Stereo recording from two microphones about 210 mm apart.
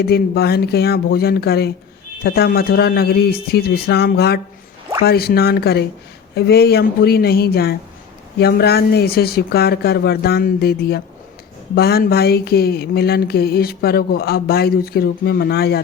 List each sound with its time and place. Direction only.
0.0 s speech: 50° left (ahead or behind)